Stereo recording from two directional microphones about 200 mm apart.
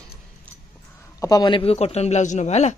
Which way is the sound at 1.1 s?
20° left (ahead or behind).